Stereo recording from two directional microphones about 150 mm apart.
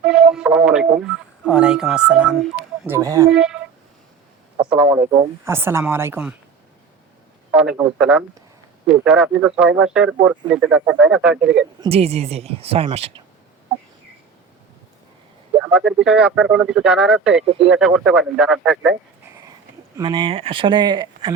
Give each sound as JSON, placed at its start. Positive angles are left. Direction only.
{"t": 0.0, "sound": "radio", "side_deg": -5}
{"t": 2.8, "sound": "speech", "side_deg": -20}
{"t": 3.3, "sound": "speech", "side_deg": -5}
{"t": 4.8, "sound": "a woman's voice", "side_deg": -35}
{"t": 5.5, "sound": "speech", "side_deg": -15}
{"t": 7.5, "sound": "speech", "side_deg": -5}
{"t": 11.9, "sound": "a woman's voice", "side_deg": -45}
{"t": 15.6, "sound": "speech", "side_deg": -5}
{"t": 20.0, "sound": "speech", "side_deg": -30}